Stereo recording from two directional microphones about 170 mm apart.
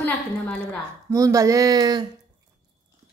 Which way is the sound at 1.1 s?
20° right (ahead or behind).